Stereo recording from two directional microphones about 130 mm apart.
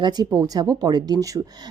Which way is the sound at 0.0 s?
30° right (ahead or behind).